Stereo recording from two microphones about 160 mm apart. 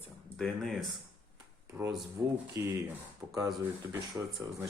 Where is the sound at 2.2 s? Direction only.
15° right (ahead or behind).